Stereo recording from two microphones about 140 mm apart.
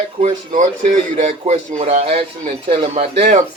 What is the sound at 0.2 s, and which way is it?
Speech, 50° right (ahead or behind).